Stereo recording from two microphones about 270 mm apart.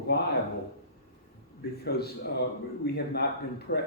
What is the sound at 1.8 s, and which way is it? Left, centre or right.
Speech, left.